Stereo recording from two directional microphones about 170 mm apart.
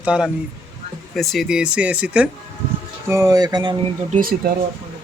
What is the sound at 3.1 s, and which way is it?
Speech, 20° right (ahead or behind).